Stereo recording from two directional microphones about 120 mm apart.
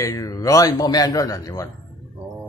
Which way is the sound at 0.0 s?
30° left (ahead or behind).